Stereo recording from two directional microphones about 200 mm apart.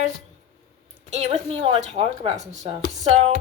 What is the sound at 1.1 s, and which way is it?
Speech, 35° right (ahead or behind).